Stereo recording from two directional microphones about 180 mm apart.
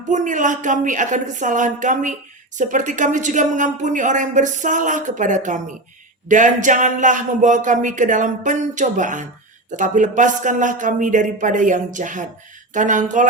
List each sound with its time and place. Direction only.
0.1 s a woman's voice: 45° right (ahead or behind)